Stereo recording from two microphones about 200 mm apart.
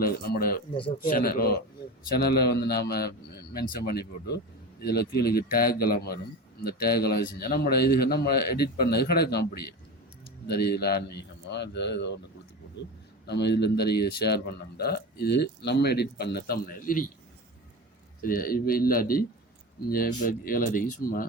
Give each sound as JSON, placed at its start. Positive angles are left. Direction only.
{"t": 0.0, "sound": "a man's voice", "side_deg": 50}
{"t": 0.7, "sound": "speech", "side_deg": 25}
{"t": 1.1, "sound": "a man's voice", "side_deg": 45}
{"t": 13.2, "sound": "a man's voice", "side_deg": 55}
{"t": 18.2, "sound": "a man's voice", "side_deg": 45}